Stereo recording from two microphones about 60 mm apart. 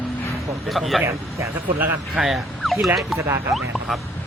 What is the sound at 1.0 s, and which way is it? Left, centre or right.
Speech, right.